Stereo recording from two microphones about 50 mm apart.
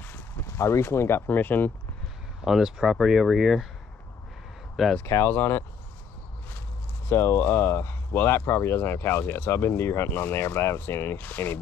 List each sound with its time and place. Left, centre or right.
0.6 s speech: left
1.2 s speech: left
2.4 s speech: centre
4.8 s speech: centre
5.2 s speech: left
7.1 s speech: left
11.1 s speech: left